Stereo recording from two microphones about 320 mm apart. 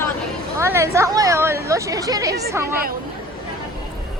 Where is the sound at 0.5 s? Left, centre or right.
Centre.